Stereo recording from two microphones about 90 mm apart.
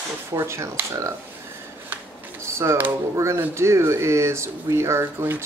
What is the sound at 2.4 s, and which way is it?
Speech, 30° right (ahead or behind).